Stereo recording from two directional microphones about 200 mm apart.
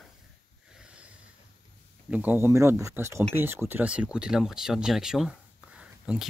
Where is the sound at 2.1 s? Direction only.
10° right (ahead or behind).